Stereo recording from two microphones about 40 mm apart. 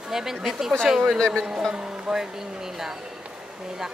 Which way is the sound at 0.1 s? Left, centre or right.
Centre.